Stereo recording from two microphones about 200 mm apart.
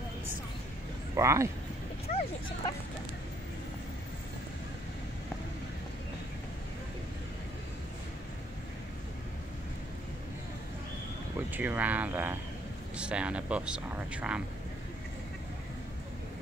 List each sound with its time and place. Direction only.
1.1 s speech: 15° right (ahead or behind)
2.0 s speech: 30° left (ahead or behind)
11.5 s speech: 10° right (ahead or behind)